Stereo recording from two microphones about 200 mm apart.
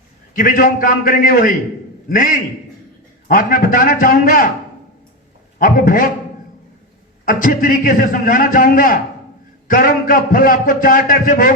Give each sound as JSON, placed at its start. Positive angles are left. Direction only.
{"t": 0.3, "sound": "a man's voice", "side_deg": 45}
{"t": 5.5, "sound": "a man's voice", "side_deg": 45}
{"t": 7.3, "sound": "a man's voice", "side_deg": 40}